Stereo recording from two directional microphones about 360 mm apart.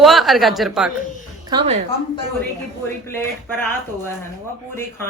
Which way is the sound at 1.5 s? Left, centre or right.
Centre.